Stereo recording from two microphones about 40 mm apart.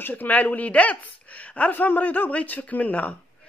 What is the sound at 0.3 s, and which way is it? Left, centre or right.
A man's voice, left.